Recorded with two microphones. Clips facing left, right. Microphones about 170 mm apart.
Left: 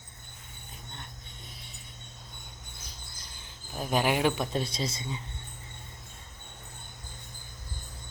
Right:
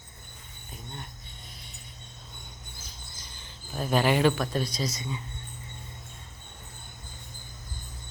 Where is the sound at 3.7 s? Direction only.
10° left (ahead or behind).